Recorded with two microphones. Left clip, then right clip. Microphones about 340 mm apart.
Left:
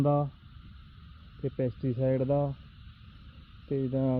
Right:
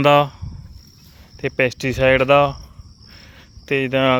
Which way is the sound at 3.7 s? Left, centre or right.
Right.